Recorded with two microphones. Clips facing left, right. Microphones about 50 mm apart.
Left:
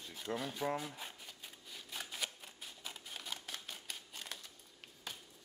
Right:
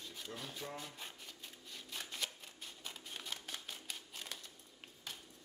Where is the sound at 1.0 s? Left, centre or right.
Centre.